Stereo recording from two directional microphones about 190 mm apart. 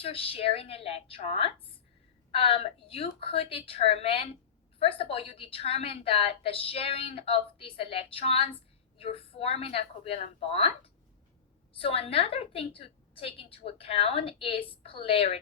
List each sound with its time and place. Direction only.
0.0 s a woman's voice: 30° left (ahead or behind)